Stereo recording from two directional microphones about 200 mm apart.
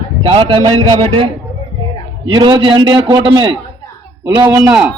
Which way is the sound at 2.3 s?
25° right (ahead or behind).